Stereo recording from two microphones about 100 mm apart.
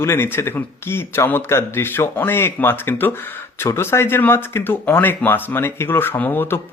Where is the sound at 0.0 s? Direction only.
25° left (ahead or behind).